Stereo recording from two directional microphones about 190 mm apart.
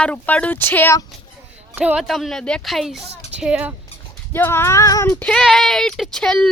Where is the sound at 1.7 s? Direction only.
5° right (ahead or behind).